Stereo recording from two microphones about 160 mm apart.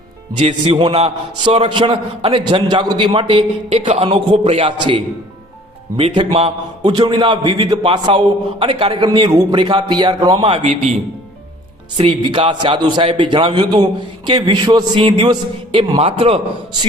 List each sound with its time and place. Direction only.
0.3 s a man's voice: 40° right (ahead or behind)
11.9 s a man's voice: 35° right (ahead or behind)